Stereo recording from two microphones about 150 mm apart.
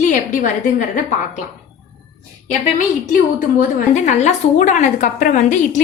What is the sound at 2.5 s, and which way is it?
A woman's voice, 60° left (ahead or behind).